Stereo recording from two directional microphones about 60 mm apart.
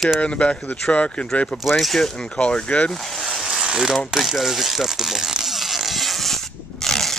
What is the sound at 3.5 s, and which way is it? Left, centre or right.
Ratchet, centre.